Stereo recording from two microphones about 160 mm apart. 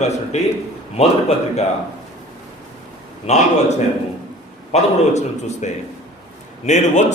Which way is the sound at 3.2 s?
45° left (ahead or behind).